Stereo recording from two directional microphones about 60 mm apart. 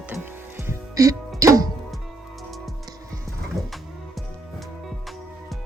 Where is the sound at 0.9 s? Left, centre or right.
Right.